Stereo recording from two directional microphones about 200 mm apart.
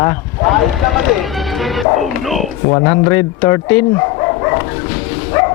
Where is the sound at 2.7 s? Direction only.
20° left (ahead or behind).